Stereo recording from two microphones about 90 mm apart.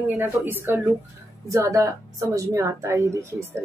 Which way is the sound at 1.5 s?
35° right (ahead or behind).